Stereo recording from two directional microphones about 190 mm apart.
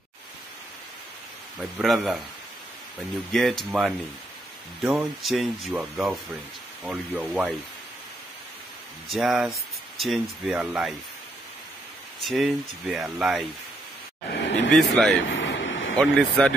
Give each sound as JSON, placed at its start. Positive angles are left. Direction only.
{"t": 1.6, "sound": "speech", "side_deg": 0}
{"t": 3.3, "sound": "speech", "side_deg": 0}
{"t": 9.1, "sound": "speech", "side_deg": 0}
{"t": 12.2, "sound": "speech", "side_deg": 0}
{"t": 14.3, "sound": "a sound", "side_deg": 65}
{"t": 14.7, "sound": "speech", "side_deg": 0}
{"t": 15.2, "sound": "vehicle", "side_deg": 75}
{"t": 16.0, "sound": "speech", "side_deg": 5}